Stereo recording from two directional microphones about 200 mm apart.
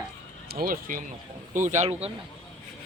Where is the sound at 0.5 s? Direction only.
45° right (ahead or behind).